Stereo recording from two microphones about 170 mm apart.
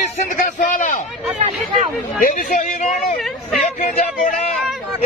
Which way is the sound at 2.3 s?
50° left (ahead or behind).